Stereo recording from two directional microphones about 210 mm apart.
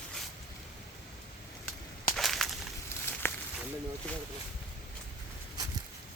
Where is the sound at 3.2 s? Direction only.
10° left (ahead or behind).